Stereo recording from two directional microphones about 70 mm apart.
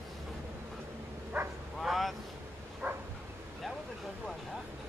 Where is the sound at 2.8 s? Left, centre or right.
Right.